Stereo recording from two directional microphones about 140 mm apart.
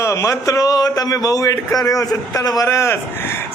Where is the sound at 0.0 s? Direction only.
20° left (ahead or behind).